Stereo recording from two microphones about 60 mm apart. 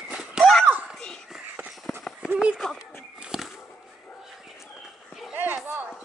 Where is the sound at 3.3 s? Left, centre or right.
Centre.